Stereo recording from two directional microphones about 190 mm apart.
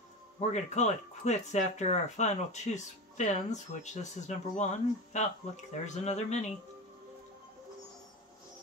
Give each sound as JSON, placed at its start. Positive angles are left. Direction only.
{"t": 0.4, "sound": "speech", "side_deg": 35}